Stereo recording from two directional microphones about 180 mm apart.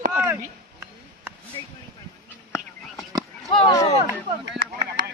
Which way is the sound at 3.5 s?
25° left (ahead or behind).